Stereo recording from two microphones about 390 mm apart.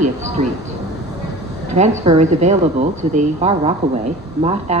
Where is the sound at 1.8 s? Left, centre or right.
Centre.